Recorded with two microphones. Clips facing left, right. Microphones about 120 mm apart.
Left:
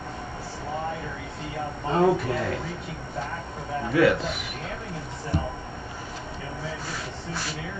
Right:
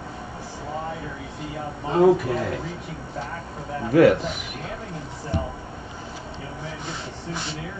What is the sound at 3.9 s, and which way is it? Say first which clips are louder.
Speech: right 5 dB; 45° right (ahead or behind).